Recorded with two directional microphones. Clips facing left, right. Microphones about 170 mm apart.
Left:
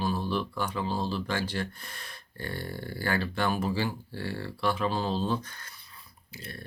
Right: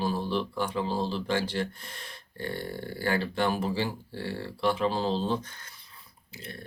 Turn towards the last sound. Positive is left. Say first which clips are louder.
# even
turn(degrees=-20)  # may be behind; listen again after turning